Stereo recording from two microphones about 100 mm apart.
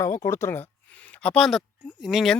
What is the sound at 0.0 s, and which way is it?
Speech, 30° left (ahead or behind).